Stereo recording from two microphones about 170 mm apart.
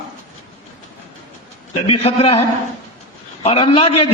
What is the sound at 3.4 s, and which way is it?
Speech, 35° left (ahead or behind).